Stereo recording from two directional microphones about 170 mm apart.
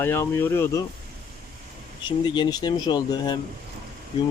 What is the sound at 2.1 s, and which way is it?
Speech, 30° left (ahead or behind).